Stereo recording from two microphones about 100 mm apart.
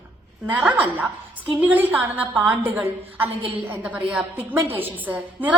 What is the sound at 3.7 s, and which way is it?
A woman's voice, 15° right (ahead or behind).